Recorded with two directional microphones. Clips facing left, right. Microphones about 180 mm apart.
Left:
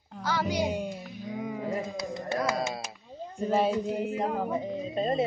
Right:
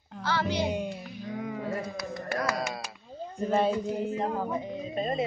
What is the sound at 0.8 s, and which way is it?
Music, centre (ahead or behind).